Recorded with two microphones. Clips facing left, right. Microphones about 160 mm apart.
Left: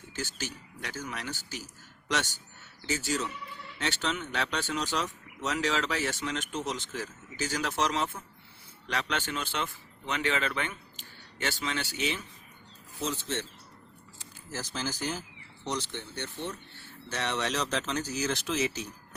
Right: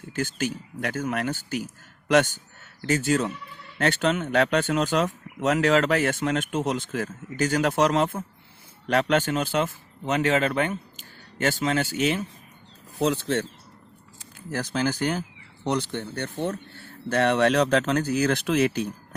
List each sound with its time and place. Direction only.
0.2 s a man's voice: 55° right (ahead or behind)
13.0 s speech: 65° right (ahead or behind)
14.5 s speech: 60° right (ahead or behind)